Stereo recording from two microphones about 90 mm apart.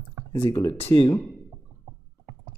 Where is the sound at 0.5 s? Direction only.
50° left (ahead or behind).